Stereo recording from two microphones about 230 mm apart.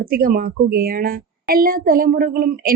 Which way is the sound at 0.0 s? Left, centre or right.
Right.